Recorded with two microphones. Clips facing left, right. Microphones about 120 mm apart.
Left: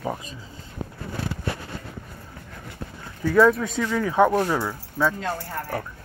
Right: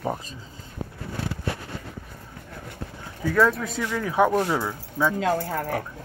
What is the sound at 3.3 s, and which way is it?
Speech, centre (ahead or behind).